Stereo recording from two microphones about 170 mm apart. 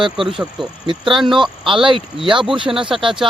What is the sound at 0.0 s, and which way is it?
Speech, 30° right (ahead or behind).